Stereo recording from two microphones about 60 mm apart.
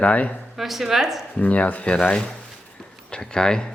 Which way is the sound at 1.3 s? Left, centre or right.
Left.